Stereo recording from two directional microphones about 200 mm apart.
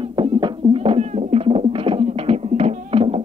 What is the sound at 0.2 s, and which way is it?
Music, 25° right (ahead or behind).